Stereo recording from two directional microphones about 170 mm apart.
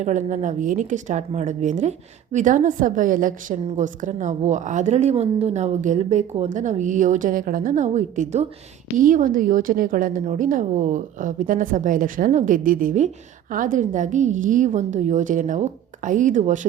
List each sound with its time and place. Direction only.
0.0 s a woman's voice: 45° right (ahead or behind)